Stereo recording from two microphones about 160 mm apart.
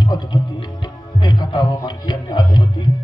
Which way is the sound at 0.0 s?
25° left (ahead or behind).